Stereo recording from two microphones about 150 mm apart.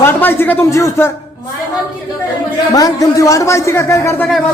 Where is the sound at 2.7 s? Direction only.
25° left (ahead or behind).